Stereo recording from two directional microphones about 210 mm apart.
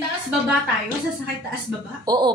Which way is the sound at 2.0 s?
20° right (ahead or behind).